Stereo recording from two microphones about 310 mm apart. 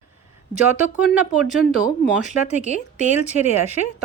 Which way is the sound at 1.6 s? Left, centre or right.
Left.